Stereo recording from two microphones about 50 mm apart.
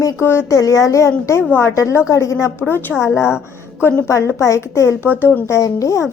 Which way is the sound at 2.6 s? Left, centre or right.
Left.